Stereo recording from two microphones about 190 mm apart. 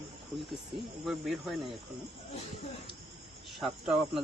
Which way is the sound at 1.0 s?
Centre (ahead or behind).